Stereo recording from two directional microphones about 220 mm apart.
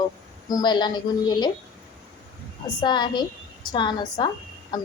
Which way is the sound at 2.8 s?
20° left (ahead or behind).